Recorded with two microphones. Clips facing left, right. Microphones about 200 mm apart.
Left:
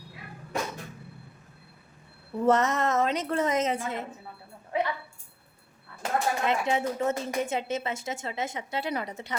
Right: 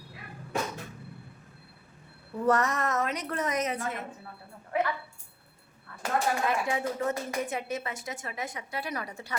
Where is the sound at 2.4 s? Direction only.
25° left (ahead or behind).